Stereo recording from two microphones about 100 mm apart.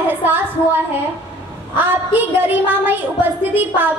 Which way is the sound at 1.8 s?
20° right (ahead or behind).